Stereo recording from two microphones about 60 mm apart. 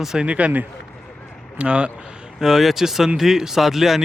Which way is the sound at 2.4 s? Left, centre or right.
Centre.